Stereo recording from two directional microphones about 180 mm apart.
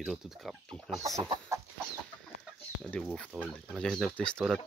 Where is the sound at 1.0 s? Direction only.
20° right (ahead or behind).